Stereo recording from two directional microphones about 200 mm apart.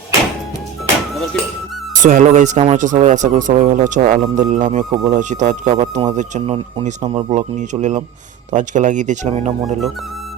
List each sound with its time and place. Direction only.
2.0 s speech: 40° right (ahead or behind)